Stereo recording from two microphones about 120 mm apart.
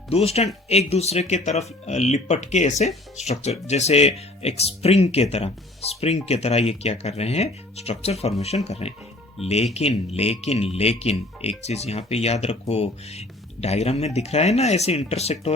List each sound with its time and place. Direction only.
0.1 s speech: 60° left (ahead or behind); by 2.9 s 75° left (ahead or behind)
3.2 s speech: 65° left (ahead or behind)